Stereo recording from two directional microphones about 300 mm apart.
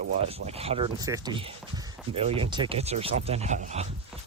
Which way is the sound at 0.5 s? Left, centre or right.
Centre.